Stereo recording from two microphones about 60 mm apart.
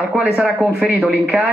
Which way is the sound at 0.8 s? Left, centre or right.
Right.